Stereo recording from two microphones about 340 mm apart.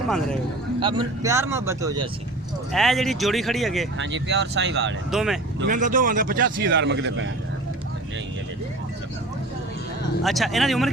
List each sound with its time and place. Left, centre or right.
0.8 s speech: centre
2.7 s speech: centre
3.9 s speech: right
5.1 s speech: centre
5.5 s speech: right
10.2 s speech: centre